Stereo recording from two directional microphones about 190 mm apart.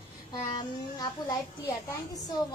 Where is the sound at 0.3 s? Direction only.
20° left (ahead or behind).